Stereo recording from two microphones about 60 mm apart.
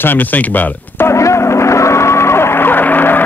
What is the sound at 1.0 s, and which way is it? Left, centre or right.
Music, left.